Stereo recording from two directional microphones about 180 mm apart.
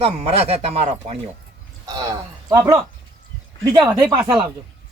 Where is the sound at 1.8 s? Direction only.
20° right (ahead or behind).